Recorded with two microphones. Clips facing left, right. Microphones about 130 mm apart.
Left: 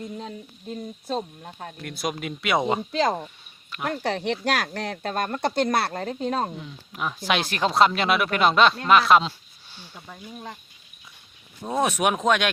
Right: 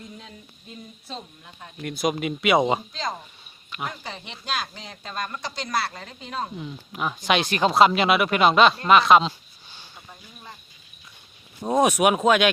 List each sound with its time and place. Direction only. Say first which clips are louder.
1.0 s speech: left 10 dB; 50° left (ahead or behind)
1.8 s speech: right 5 dB; centre (ahead or behind)
2.9 s speech: left 8 dB; 70° left (ahead or behind); by 6.5 s 50° left (ahead or behind)
6.6 s speech: right 2 dB; 5° right (ahead or behind)
11.6 s speech: right 4 dB; 15° right (ahead or behind)